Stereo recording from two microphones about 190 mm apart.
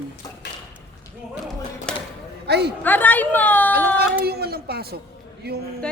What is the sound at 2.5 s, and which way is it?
Speech, 60° right (ahead or behind).